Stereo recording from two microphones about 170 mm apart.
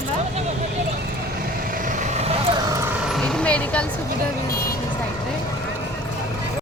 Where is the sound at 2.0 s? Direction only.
40° right (ahead or behind).